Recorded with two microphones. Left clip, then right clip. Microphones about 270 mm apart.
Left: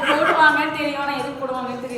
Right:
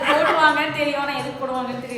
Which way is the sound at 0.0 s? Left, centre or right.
Right.